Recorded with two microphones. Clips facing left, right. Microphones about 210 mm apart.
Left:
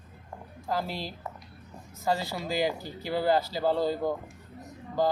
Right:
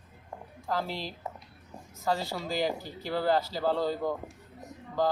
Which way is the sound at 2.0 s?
10° left (ahead or behind).